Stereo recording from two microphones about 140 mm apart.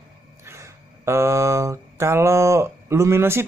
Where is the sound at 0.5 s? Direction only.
20° right (ahead or behind).